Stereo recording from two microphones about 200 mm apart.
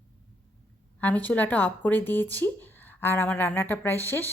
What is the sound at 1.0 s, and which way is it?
A woman's voice, 5° left (ahead or behind).